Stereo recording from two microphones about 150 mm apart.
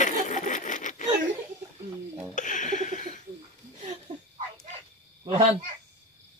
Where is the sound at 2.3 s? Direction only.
55° left (ahead or behind).